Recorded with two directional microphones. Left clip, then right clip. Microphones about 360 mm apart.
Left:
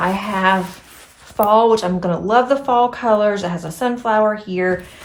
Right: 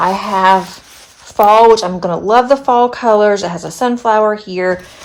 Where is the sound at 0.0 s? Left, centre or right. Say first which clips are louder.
Right 6 dB; centre.